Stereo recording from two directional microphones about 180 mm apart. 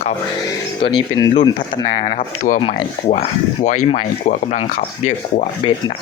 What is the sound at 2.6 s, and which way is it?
Speech, 30° left (ahead or behind).